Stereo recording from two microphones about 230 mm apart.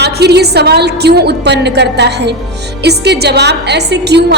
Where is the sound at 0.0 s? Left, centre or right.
Right.